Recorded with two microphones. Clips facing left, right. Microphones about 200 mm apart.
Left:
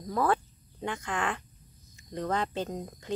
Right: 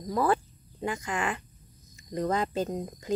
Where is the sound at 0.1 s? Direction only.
5° right (ahead or behind).